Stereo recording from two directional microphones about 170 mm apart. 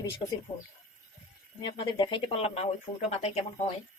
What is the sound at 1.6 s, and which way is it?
Speech, 30° left (ahead or behind).